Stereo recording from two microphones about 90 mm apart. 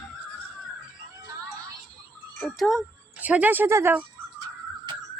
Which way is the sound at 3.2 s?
15° right (ahead or behind).